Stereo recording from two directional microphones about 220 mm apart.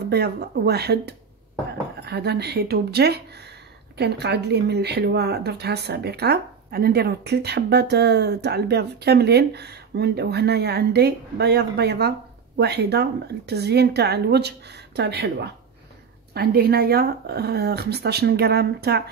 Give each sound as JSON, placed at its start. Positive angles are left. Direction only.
{"t": 0.1, "sound": "speech", "side_deg": -45}